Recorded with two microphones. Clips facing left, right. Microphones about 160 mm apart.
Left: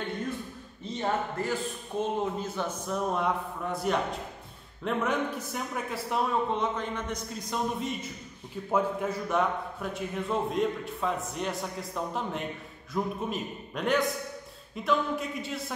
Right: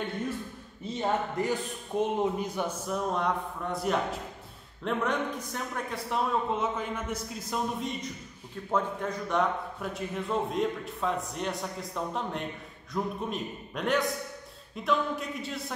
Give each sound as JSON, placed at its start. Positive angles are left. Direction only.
{"t": 1.0, "sound": "a man's voice", "side_deg": -15}
{"t": 2.9, "sound": "speech", "side_deg": 5}